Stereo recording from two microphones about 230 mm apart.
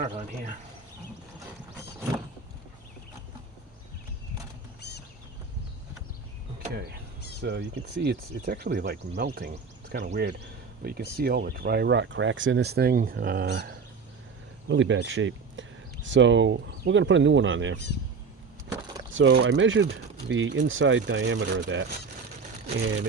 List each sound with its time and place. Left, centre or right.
0.0 s a man's voice: right
4.8 s a sound: left
7.4 s speech: right
10.1 s speech: right
19.1 s speech: right